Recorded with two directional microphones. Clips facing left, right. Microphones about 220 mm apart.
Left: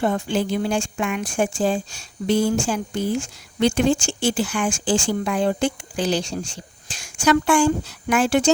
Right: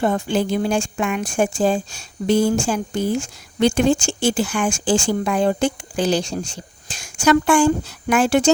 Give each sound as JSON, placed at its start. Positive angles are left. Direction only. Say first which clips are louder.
{"t": 0.0, "sound": "speech", "louder": "right 2 dB", "side_deg": -45}